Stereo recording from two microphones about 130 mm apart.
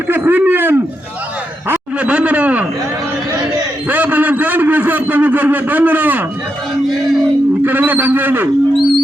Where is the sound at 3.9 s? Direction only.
15° right (ahead or behind).